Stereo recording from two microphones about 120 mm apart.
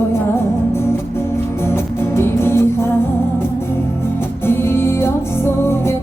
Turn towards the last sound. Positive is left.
turn(degrees=20)  # may be behind; listen again after turning